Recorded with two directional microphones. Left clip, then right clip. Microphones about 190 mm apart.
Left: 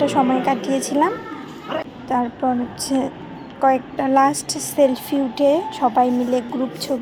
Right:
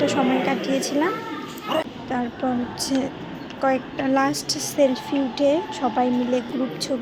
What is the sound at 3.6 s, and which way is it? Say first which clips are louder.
A woman's voice: left 5 dB; 15° left (ahead or behind).